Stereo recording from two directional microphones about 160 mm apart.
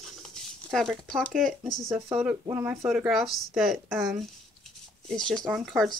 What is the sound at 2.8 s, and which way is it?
Speech, 5° right (ahead or behind).